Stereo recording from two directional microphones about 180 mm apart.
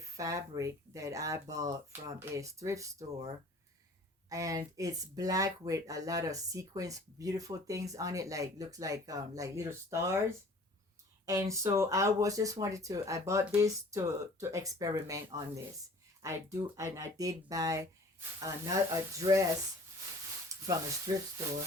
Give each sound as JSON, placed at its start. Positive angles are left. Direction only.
{"t": 0.0, "sound": "speech", "side_deg": -15}
{"t": 4.3, "sound": "speech", "side_deg": -20}
{"t": 16.2, "sound": "speech", "side_deg": -15}
{"t": 20.5, "sound": "sizzle", "side_deg": -20}
{"t": 21.1, "sound": "speech", "side_deg": -25}